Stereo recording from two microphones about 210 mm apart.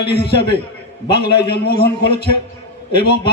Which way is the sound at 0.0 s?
50° left (ahead or behind).